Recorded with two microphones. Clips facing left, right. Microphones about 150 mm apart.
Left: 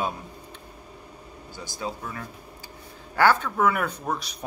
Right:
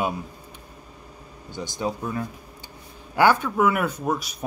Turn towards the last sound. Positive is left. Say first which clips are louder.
# right 4 dB
turn(degrees=-5)  # may be behind; listen again after turning